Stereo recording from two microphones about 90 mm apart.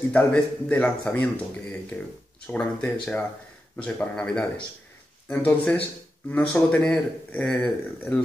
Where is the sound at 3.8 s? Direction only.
15° left (ahead or behind).